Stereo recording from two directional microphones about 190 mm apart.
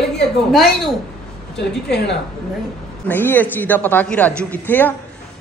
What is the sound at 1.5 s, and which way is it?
Speech, 65° left (ahead or behind).